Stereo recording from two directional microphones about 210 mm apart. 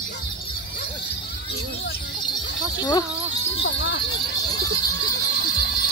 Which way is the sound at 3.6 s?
60° left (ahead or behind).